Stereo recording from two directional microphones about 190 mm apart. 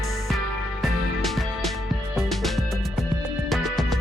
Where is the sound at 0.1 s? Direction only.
Centre (ahead or behind).